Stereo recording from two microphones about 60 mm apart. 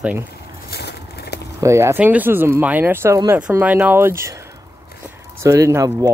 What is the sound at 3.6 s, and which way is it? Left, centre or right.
Speech, right.